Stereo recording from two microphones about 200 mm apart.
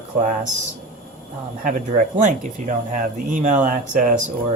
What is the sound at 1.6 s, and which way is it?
Speech, 40° right (ahead or behind).